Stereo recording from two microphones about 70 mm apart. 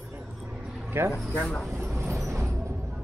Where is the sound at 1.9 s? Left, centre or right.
Right.